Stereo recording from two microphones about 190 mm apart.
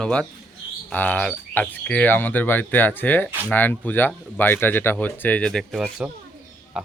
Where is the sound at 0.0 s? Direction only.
5° left (ahead or behind).